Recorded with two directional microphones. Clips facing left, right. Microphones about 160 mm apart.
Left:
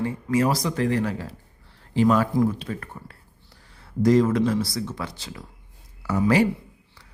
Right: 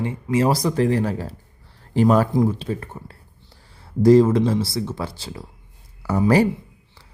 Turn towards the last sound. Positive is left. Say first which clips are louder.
# right 3 dB
turn(degrees=-35)  # may be behind; listen again after turning